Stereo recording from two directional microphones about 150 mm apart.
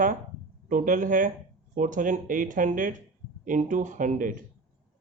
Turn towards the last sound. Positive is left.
turn(degrees=-65)  # may be behind; listen again after turning